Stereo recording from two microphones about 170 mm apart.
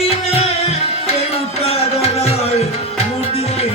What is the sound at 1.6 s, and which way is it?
Music, 35° left (ahead or behind).